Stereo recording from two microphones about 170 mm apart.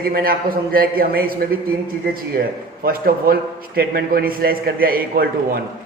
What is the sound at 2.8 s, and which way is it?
A man's voice, 60° right (ahead or behind).